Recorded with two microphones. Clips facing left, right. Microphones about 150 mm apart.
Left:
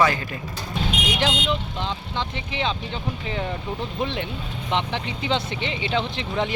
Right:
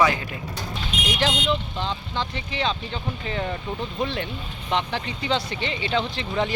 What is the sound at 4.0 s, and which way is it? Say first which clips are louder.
Speech: even; 15° left (ahead or behind).